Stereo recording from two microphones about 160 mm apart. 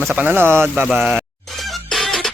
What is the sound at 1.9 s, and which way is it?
Music, centre (ahead or behind).